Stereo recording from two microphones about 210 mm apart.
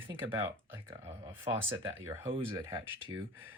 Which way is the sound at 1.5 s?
20° right (ahead or behind).